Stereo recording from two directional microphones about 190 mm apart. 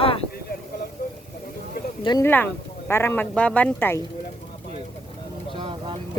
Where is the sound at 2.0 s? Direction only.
15° left (ahead or behind).